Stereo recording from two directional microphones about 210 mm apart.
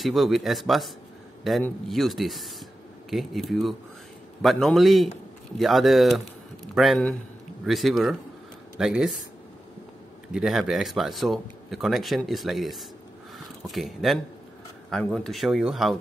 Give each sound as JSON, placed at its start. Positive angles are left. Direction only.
{"t": 0.0, "sound": "speech", "side_deg": 0}
{"t": 10.3, "sound": "speech", "side_deg": 0}